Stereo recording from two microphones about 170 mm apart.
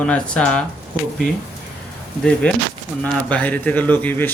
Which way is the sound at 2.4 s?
10° left (ahead or behind).